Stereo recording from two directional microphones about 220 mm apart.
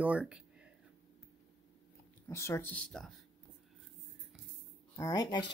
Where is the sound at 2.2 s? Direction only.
10° left (ahead or behind).